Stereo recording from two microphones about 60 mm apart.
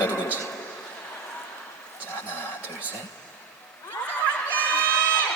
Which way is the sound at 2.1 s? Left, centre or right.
Left.